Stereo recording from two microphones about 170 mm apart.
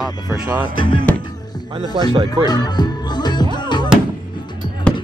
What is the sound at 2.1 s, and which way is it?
Speech, 30° right (ahead or behind).